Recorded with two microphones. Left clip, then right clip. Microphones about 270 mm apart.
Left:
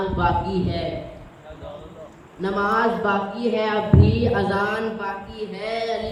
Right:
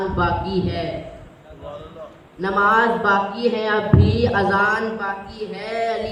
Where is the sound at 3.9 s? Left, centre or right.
Right.